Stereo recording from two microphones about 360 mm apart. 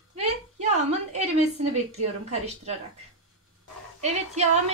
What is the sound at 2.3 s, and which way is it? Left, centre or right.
Speech, centre.